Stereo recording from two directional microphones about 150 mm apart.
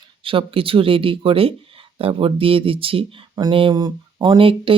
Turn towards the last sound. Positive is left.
turn(degrees=-35)  # may be behind; listen again after turning